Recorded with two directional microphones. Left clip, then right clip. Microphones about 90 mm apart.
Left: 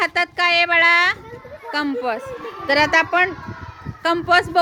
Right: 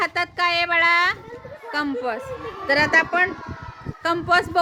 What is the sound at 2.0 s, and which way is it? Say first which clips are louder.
Speech: left 3 dB; 30° left (ahead or behind).